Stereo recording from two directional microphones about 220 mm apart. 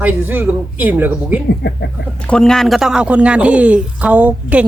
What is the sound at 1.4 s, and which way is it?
Speech, 50° left (ahead or behind).